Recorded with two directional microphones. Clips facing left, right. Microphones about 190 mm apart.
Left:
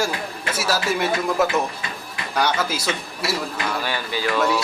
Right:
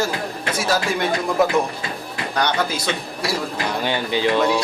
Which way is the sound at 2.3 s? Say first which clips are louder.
Even; 5° left (ahead or behind).